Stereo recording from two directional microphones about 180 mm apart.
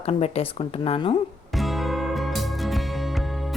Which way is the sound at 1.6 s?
Centre (ahead or behind).